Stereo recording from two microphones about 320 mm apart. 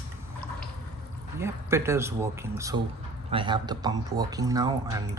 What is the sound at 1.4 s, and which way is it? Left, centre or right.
Speech, centre.